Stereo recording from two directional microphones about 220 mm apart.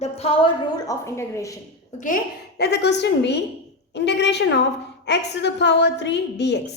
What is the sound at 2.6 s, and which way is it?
A woman's voice, 50° left (ahead or behind).